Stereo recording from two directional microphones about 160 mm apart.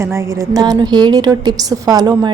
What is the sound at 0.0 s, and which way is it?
A woman's voice, 15° right (ahead or behind).